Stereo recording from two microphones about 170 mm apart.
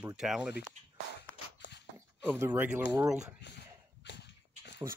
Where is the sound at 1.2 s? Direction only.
85° left.